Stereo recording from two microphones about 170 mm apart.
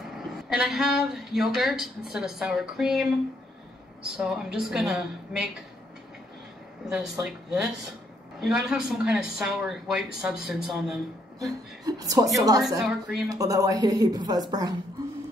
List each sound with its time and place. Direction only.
0.0 s speech: 5° right (ahead or behind)
4.2 s speech: centre (ahead or behind)
6.9 s speech: 5° right (ahead or behind)
11.3 s speech: 20° right (ahead or behind)
12.8 s speech: 5° right (ahead or behind)
13.3 s speech: 20° right (ahead or behind)